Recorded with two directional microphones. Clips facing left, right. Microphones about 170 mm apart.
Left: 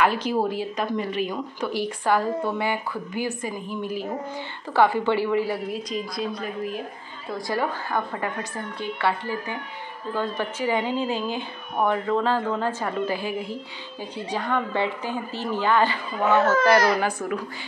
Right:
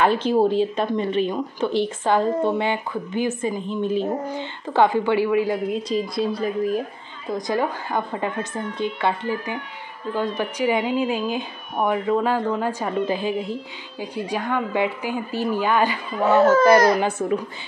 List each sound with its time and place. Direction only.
0.0 s a woman's voice: 25° right (ahead or behind)
5.9 s a woman's voice: 30° right (ahead or behind)
7.2 s a woman's voice: 20° right (ahead or behind)
17.0 s a woman's voice: 25° right (ahead or behind)